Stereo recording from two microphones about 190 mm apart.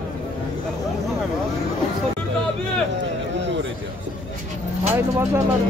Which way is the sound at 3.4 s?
70° right (ahead or behind).